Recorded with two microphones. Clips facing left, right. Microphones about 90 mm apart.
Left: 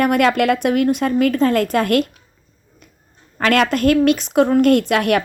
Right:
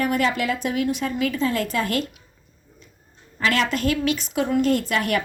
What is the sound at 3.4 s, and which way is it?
Speech, 55° left (ahead or behind).